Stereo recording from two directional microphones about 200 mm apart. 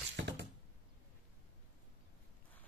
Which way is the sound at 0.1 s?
60° right (ahead or behind).